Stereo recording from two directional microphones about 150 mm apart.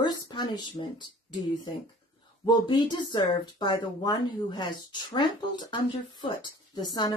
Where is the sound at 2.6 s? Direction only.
30° left (ahead or behind).